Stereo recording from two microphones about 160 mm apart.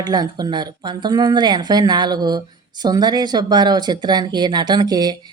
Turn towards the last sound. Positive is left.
turn(degrees=-25)  # may be behind; listen again after turning